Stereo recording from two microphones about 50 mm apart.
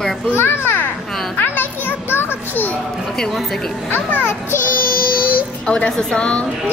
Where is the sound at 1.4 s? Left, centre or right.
Left.